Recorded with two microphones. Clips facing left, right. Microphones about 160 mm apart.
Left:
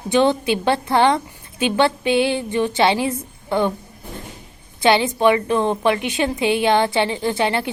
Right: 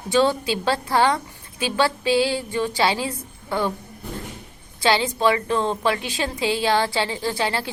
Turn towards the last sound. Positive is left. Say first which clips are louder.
# left 4 dB
turn(degrees=20)  # may be behind; listen again after turning